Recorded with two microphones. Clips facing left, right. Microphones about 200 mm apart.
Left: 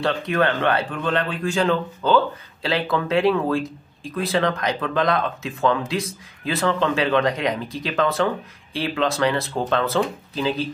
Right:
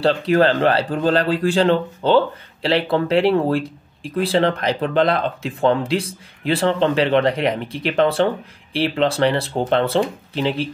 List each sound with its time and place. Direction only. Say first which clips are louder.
0.0 s speech: right 5 dB; 30° right (ahead or behind)